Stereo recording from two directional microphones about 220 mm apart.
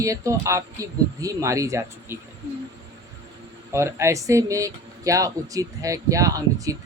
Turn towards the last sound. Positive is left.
turn(degrees=-15)  # may be behind; listen again after turning